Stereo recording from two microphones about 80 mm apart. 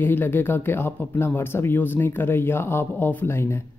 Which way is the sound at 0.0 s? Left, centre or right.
Left.